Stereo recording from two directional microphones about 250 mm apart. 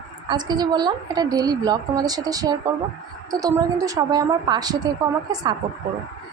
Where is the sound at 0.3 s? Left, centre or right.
Centre.